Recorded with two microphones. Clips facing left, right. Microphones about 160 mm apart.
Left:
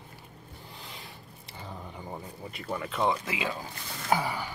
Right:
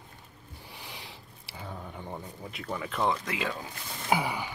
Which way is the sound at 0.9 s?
80° right.